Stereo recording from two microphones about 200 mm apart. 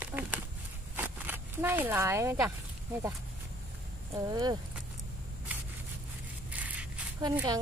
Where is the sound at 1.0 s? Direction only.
10° right (ahead or behind).